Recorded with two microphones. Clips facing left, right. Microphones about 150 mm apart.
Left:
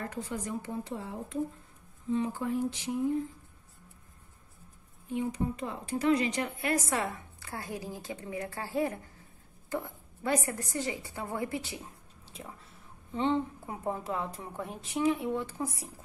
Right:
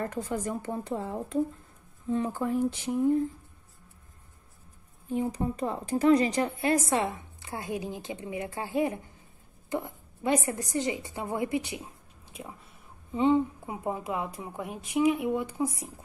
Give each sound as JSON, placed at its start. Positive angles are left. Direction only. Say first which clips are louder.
{"t": 0.1, "sound": "speech", "louder": "right 4 dB", "side_deg": -50}
{"t": 5.1, "sound": "a woman's voice", "louder": "right 3 dB", "side_deg": -40}